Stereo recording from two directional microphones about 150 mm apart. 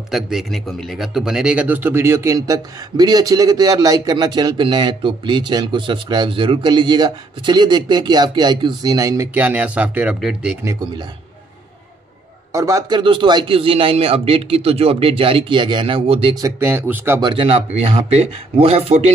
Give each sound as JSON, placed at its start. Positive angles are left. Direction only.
{"t": 0.1, "sound": "speech", "side_deg": 0}
{"t": 9.3, "sound": "speech", "side_deg": -10}
{"t": 10.6, "sound": "speech", "side_deg": -20}
{"t": 12.5, "sound": "speech", "side_deg": -20}
{"t": 16.3, "sound": "speech", "side_deg": -20}
{"t": 17.2, "sound": "speech", "side_deg": -35}